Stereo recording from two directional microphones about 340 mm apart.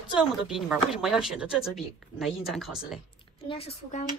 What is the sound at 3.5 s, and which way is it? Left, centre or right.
Speech, centre.